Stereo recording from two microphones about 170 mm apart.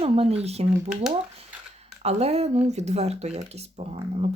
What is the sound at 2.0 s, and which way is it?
Speech, 40° right (ahead or behind).